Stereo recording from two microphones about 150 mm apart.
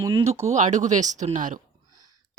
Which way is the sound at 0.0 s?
35° right (ahead or behind).